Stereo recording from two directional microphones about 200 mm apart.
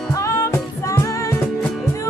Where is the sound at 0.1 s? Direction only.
15° left (ahead or behind).